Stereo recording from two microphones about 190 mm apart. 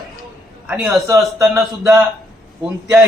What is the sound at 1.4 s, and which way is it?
Speech, 15° right (ahead or behind).